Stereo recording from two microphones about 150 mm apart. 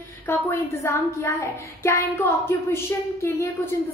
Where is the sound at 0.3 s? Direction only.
15° left (ahead or behind).